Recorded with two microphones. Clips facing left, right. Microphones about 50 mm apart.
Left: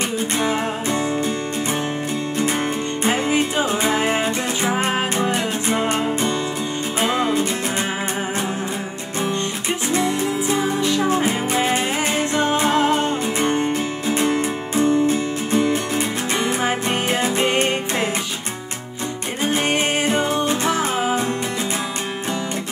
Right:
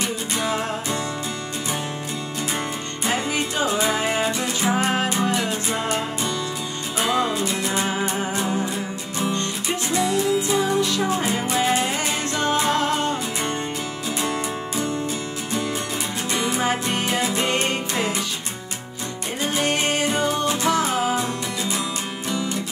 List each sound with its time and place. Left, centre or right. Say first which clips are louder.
3.1 s music: left 4 dB; centre
3.6 s music: left 2 dB; left
7.0 s music: left 2 dB; left
9.9 s music: right 1 dB; left
13.5 s music: left 6 dB; left
16.3 s music: even; left
19.6 s music: even; left